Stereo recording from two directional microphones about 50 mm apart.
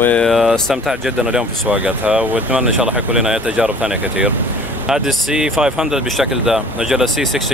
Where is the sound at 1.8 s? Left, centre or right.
Right.